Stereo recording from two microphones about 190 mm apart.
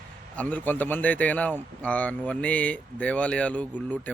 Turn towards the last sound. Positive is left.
turn(degrees=5)  # may be behind; listen again after turning